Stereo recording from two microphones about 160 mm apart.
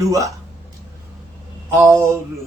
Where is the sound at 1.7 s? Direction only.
15° right (ahead or behind).